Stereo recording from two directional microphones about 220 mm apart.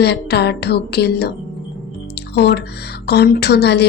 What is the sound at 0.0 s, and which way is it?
Speech, 50° left (ahead or behind).